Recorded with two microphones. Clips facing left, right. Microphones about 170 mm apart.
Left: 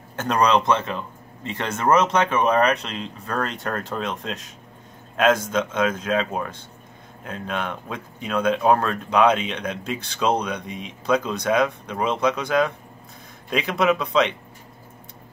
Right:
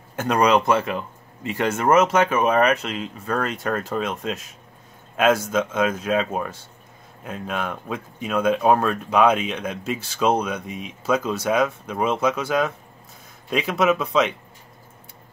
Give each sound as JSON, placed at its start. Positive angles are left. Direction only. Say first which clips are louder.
{"t": 0.1, "sound": "speech", "louder": "right 1 dB", "side_deg": -10}